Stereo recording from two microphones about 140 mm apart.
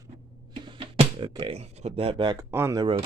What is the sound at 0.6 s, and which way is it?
Music, 40° right (ahead or behind).